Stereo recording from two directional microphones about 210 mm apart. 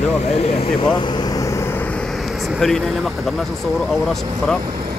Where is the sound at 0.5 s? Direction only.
25° left (ahead or behind).